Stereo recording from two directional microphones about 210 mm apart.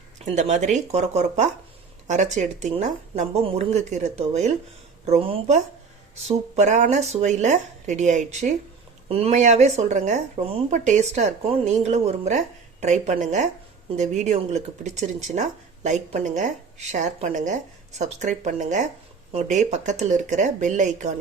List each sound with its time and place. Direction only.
0.3 s speech: 35° right (ahead or behind)